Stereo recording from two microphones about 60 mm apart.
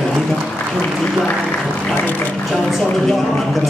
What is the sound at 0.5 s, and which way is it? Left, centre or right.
Speech, centre.